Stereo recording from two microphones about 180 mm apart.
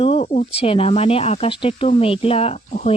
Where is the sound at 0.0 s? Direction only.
35° left (ahead or behind).